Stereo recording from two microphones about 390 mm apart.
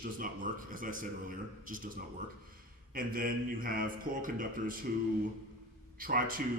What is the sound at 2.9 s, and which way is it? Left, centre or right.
Speech, right.